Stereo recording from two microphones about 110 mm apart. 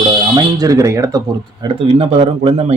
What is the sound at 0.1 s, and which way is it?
Speech, 35° right (ahead or behind).